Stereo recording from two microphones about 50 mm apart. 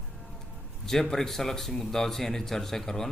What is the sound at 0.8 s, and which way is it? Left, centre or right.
A man's voice, centre.